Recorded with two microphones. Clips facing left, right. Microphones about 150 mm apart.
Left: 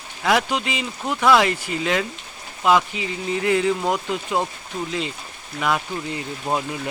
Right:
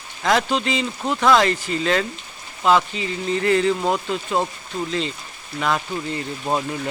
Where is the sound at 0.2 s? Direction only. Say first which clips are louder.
Right 1 dB; 10° left (ahead or behind).